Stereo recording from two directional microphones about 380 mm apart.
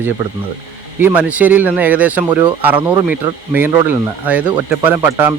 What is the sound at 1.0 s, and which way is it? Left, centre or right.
Speech, centre.